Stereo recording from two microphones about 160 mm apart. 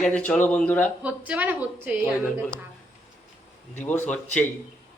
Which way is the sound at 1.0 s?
10° right (ahead or behind).